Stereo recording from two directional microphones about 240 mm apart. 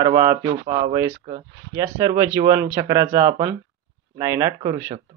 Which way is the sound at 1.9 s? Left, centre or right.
Centre.